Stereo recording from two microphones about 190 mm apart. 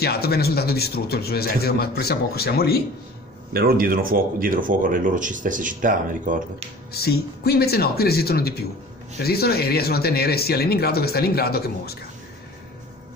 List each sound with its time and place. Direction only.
0.0 s speech: 55° left (ahead or behind)
3.5 s speech: 50° right (ahead or behind)
6.9 s speech: 55° left (ahead or behind)